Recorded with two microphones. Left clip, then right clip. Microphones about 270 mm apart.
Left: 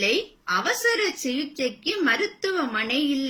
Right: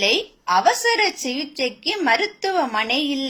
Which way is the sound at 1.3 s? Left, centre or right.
Centre.